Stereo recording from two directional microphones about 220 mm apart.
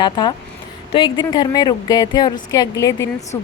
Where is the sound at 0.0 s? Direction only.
20° left (ahead or behind).